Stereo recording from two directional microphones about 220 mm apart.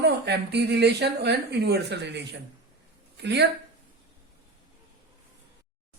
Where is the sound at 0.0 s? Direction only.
50° right (ahead or behind).